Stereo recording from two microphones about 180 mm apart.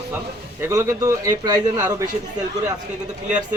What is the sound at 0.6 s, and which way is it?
A man's voice, 15° right (ahead or behind).